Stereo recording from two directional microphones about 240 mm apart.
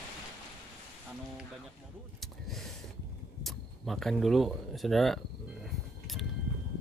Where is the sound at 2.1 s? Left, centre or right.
Centre.